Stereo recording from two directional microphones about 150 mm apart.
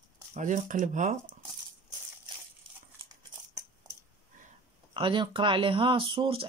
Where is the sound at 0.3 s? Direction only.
55° right (ahead or behind).